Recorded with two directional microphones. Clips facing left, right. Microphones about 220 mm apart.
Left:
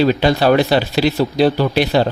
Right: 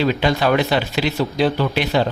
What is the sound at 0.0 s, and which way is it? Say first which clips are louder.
Speech: left 4 dB; 35° left (ahead or behind).